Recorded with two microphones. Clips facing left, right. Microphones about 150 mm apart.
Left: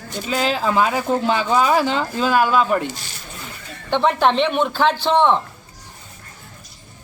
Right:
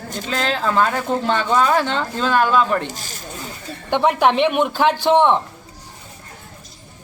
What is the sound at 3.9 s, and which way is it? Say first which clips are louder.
Speech: right 1 dB; 10° right (ahead or behind).